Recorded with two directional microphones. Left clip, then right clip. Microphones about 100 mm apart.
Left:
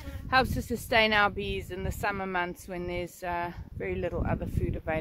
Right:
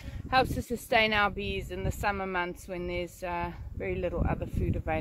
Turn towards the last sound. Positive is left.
turn(degrees=35)  # may be behind; listen again after turning